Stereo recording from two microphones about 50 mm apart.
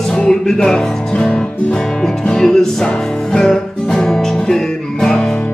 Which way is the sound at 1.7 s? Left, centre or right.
Centre.